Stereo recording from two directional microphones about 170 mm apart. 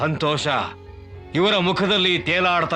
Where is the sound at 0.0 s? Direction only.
Centre (ahead or behind).